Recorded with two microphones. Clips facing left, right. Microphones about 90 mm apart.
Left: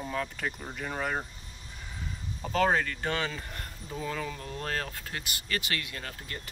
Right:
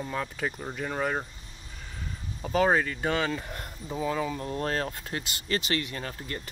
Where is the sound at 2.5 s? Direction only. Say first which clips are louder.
Right 2 dB; 10° right (ahead or behind).